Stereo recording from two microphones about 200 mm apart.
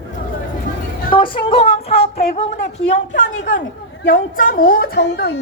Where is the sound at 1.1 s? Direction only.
25° left (ahead or behind).